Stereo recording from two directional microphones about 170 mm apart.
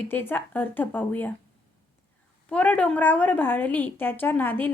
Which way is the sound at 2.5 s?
10° left (ahead or behind).